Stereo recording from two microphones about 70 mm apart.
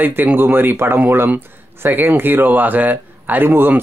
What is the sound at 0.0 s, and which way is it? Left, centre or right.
Speech, right.